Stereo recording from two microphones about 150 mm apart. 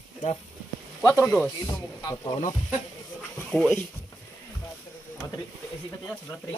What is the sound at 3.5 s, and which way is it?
Speech, 5° left (ahead or behind).